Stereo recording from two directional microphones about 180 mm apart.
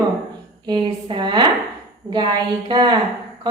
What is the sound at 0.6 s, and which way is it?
Speech, 25° right (ahead or behind).